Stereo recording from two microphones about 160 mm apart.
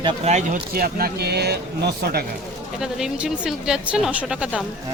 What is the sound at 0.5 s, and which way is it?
Speech, 65° right (ahead or behind).